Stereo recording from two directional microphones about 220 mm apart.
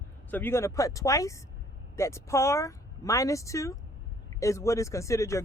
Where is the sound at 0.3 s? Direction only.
10° left (ahead or behind).